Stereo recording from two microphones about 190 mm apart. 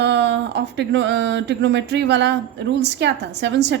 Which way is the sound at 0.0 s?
65° right (ahead or behind).